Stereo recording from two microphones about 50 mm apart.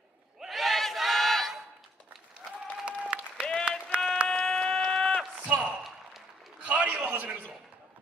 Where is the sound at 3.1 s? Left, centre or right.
Right.